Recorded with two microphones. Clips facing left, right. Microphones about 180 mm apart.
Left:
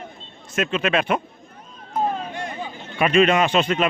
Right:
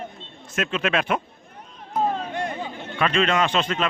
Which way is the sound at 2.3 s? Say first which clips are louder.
Right 2 dB; 60° right (ahead or behind).